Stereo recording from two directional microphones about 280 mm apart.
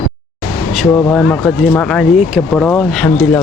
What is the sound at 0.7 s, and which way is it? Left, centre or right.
Speech, centre.